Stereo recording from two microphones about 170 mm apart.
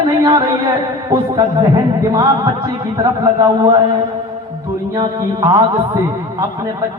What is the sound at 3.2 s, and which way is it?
Speech, 20° right (ahead or behind).